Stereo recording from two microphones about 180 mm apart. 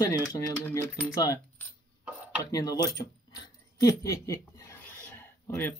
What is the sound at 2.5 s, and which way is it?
Speech, 20° left (ahead or behind).